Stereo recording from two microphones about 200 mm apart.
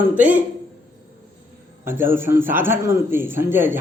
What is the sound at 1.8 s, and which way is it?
A man's voice, 10° right (ahead or behind).